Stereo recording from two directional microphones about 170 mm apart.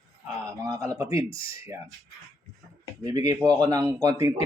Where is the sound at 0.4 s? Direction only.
20° right (ahead or behind).